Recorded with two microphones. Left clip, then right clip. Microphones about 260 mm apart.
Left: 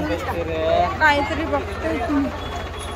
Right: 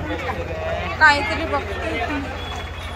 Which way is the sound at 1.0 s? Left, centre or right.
Centre.